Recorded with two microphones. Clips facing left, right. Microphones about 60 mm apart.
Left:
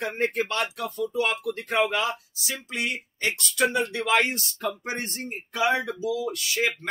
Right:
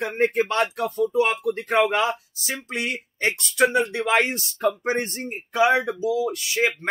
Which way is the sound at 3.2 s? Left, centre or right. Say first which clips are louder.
Right 4 dB; right.